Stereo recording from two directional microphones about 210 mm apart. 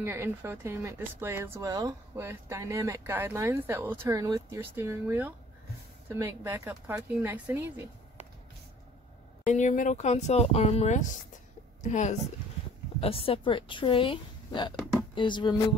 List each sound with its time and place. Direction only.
0.0 s speech: 10° right (ahead or behind)
9.4 s a woman's voice: 35° left (ahead or behind)